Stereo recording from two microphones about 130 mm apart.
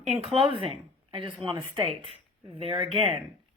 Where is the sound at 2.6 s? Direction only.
45° right (ahead or behind).